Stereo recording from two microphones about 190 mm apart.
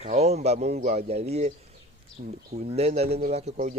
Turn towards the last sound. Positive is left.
turn(degrees=-35)  # may be behind; listen again after turning